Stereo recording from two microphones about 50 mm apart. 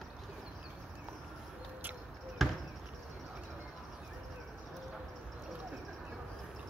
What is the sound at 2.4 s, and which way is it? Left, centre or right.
Basketball bounce, centre.